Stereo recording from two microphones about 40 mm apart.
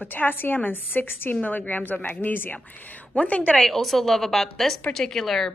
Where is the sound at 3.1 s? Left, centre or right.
Left.